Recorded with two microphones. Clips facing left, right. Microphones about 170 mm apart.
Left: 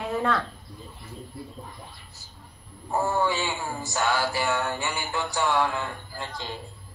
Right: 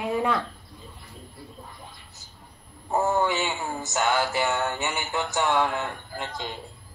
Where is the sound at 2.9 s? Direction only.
20° right (ahead or behind).